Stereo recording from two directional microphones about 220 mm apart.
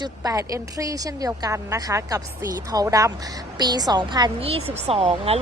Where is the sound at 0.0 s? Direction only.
15° right (ahead or behind).